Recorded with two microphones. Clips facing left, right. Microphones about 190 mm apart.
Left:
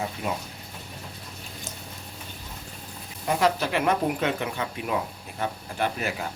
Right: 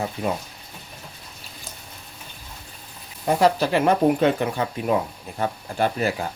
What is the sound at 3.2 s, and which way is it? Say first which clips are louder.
Speech: right 5 dB; 35° right (ahead or behind).